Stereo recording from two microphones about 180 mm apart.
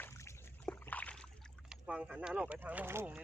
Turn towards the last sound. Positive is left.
turn(degrees=-10)  # may be behind; listen again after turning